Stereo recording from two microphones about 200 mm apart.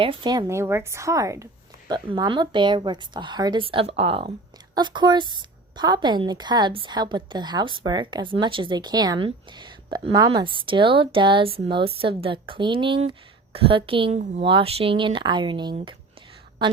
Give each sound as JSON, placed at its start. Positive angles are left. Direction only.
{"t": 0.0, "sound": "a woman's voice", "side_deg": -25}